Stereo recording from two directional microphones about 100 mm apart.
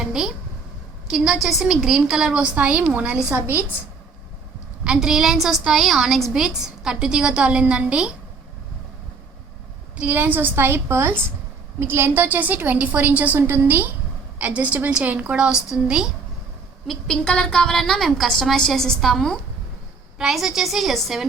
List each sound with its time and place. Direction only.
0.0 s a sound: 5° right (ahead or behind)
1.1 s a woman's voice: 5° right (ahead or behind)
4.8 s a woman's voice: 5° right (ahead or behind)
10.0 s a woman's voice: 20° right (ahead or behind)
16.8 s a woman's voice: 5° left (ahead or behind)